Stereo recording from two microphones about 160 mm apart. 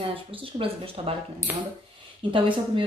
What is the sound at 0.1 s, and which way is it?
Speech, 35° right (ahead or behind).